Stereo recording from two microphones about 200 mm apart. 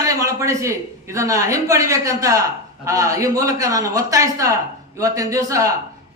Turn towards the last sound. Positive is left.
turn(degrees=-15)  # may be behind; listen again after turning